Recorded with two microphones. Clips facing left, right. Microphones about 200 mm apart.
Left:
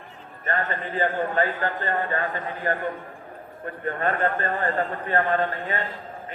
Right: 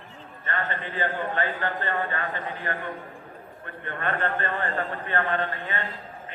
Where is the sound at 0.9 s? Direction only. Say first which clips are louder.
Left 5 dB; 40° left (ahead or behind).